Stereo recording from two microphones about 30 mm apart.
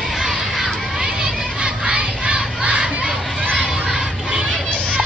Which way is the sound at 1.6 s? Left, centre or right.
Right.